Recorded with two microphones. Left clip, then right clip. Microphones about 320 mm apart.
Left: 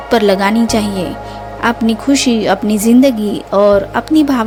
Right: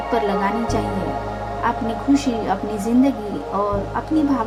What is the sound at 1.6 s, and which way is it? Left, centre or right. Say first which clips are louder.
Speech: left 7 dB; left.